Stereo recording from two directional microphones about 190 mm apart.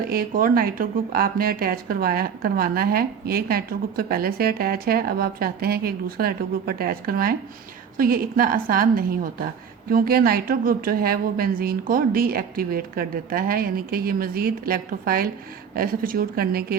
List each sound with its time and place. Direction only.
0.1 s speech: 50° right (ahead or behind)